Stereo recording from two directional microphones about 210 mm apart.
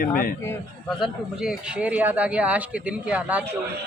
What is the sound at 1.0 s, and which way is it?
Speech, centre (ahead or behind).